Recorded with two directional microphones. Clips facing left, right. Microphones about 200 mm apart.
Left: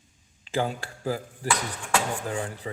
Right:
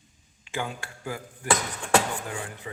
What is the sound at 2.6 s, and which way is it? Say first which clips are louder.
Speech: left 4 dB; 30° left (ahead or behind).